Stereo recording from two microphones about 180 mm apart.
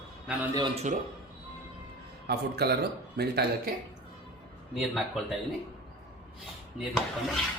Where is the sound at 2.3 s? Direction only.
60° right (ahead or behind).